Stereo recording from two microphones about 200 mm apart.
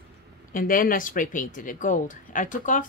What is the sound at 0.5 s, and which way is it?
Speech, 45° left (ahead or behind).